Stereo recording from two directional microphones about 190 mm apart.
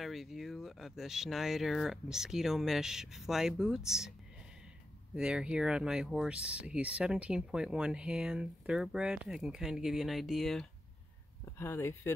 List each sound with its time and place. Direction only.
0.0 s speech: centre (ahead or behind)
5.1 s speech: 5° right (ahead or behind)
11.4 s speech: 15° left (ahead or behind)